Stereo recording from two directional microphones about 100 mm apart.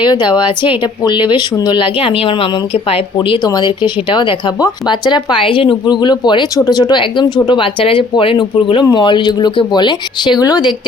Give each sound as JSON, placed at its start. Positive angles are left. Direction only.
{"t": 0.0, "sound": "speech", "side_deg": 50}
{"t": 2.7, "sound": "speech", "side_deg": 75}
{"t": 3.2, "sound": "speech", "side_deg": 55}